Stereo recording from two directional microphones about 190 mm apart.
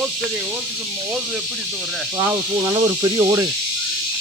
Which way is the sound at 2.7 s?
20° right (ahead or behind).